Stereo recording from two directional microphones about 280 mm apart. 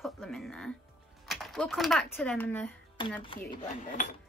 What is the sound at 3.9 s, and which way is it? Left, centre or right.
Speech, left.